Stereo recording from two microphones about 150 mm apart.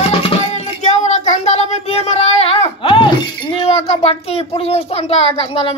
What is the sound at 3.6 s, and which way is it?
Chink, 40° left (ahead or behind).